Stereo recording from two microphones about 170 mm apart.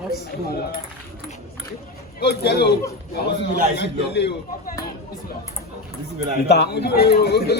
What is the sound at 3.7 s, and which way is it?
Speech, 90° left.